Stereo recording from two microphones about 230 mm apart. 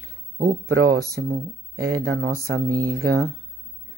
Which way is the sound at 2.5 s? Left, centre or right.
Right.